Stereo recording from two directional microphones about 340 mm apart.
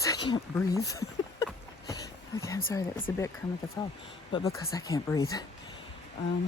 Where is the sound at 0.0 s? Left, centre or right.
Centre.